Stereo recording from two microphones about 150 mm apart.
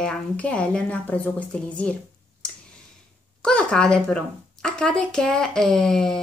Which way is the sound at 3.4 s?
5° left (ahead or behind).